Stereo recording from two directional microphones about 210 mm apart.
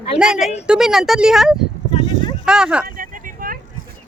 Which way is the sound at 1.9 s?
25° left (ahead or behind).